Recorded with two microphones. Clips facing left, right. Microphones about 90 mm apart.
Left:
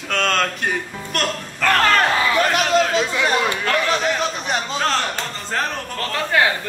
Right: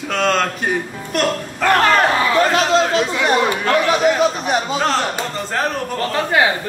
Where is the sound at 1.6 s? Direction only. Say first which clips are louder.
Right 3 dB; 20° right (ahead or behind).